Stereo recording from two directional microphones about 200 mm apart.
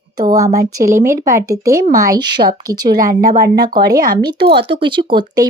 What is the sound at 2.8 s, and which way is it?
Speech, 50° right (ahead or behind).